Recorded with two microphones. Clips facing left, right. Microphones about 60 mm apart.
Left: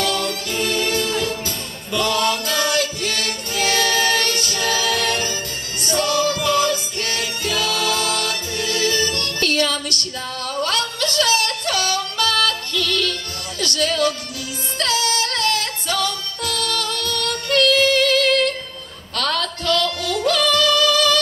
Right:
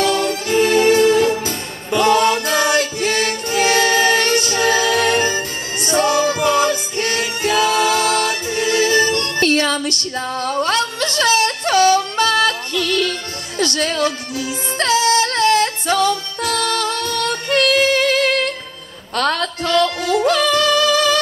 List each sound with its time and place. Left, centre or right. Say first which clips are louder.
0.0 s music: right 5 dB; right